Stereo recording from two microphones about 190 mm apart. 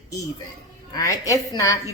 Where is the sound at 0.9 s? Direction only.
20° left (ahead or behind).